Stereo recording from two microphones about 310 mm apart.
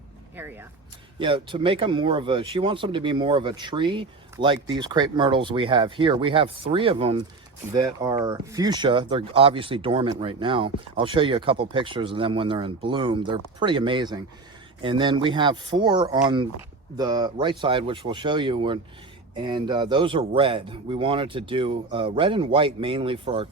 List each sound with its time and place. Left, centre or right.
0.3 s speech: centre